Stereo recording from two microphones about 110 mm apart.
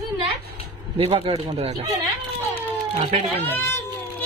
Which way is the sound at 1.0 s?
60° right (ahead or behind).